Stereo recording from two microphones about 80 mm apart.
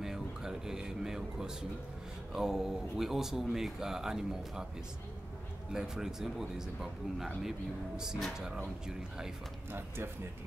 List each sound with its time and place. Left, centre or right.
0.0 s speech: centre
5.7 s speech: centre
8.8 s speech: centre
9.7 s speech: right